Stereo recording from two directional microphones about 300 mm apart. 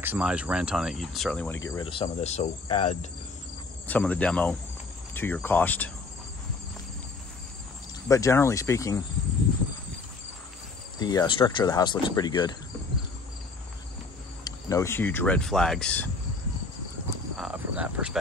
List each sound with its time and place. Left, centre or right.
0.0 s speech: centre
1.7 s cricket: centre
3.8 s speech: centre
8.1 s speech: centre
11.0 s speech: centre
14.4 s speech: centre
17.4 s cricket: centre